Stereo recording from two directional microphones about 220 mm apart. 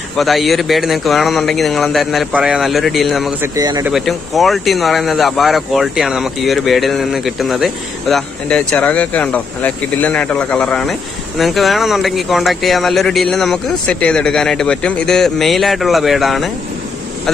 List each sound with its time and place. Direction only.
0.2 s speech: centre (ahead or behind)
3.5 s speech: 15° right (ahead or behind)
3.9 s speech: centre (ahead or behind)